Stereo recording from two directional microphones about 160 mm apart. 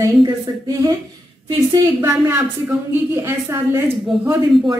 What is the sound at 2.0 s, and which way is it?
Speech, 15° right (ahead or behind).